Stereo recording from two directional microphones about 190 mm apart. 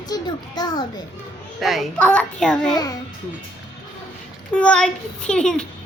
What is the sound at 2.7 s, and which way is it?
Speech, 20° left (ahead or behind).